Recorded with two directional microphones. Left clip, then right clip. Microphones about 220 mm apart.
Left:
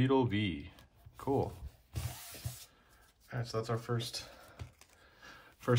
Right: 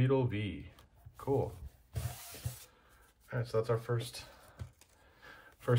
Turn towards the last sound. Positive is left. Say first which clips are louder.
# left 1 dB
turn(degrees=20)  # may be behind; listen again after turning